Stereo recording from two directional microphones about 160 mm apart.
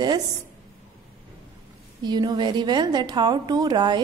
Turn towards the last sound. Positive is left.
turn(degrees=-25)  # may be behind; listen again after turning